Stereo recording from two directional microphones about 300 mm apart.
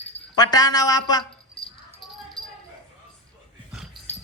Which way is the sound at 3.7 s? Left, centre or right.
Centre.